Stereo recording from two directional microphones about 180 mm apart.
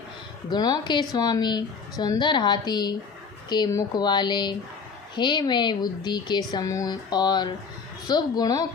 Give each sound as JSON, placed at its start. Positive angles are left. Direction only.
{"t": 0.5, "sound": "speech", "side_deg": 25}